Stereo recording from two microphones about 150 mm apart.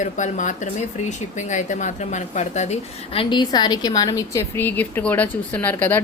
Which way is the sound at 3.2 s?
30° left (ahead or behind).